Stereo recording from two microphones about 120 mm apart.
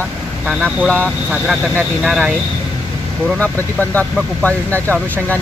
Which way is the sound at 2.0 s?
5° right (ahead or behind).